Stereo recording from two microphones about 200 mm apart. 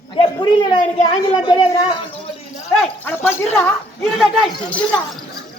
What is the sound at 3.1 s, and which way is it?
A man's voice, 10° left (ahead or behind).